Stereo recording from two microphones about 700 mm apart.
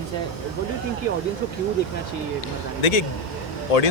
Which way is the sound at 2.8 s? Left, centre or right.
Left.